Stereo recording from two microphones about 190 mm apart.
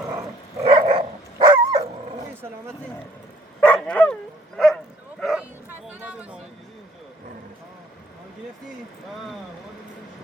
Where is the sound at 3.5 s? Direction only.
10° left (ahead or behind).